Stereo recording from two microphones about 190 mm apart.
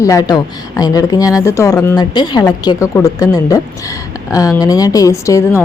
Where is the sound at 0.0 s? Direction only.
15° left (ahead or behind).